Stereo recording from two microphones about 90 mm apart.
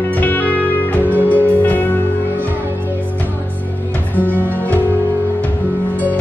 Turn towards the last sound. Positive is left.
turn(degrees=-20)  # may be behind; listen again after turning